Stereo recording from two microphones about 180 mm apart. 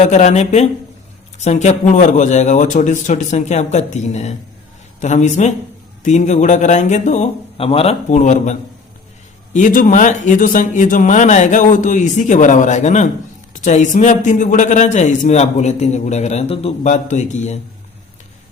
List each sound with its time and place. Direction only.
0.0 s a man's voice: 40° left (ahead or behind)